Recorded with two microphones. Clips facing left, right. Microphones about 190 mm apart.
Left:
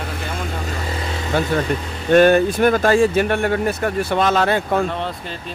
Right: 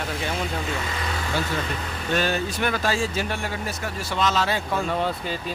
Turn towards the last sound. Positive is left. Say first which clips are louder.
# left 7 dB
turn(degrees=60)  # may be behind; listen again after turning